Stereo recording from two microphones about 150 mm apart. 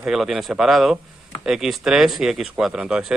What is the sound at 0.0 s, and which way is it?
Speech, 5° right (ahead or behind).